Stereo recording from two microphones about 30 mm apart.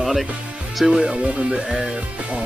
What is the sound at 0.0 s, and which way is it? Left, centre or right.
Music, centre.